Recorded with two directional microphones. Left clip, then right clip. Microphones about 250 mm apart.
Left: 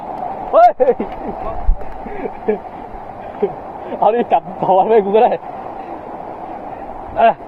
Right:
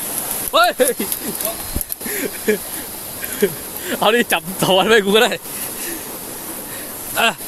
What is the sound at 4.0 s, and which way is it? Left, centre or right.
Speech, right.